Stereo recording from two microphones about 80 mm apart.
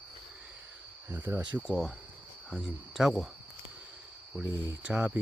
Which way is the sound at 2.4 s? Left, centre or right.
Centre.